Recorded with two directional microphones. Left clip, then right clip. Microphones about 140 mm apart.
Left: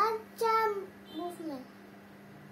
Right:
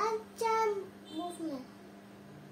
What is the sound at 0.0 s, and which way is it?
Child singing, 20° right (ahead or behind).